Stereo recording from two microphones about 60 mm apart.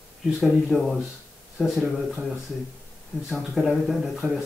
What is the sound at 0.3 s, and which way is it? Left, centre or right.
Speech, centre.